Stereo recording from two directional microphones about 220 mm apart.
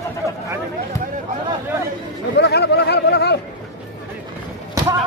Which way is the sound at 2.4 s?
50° left (ahead or behind).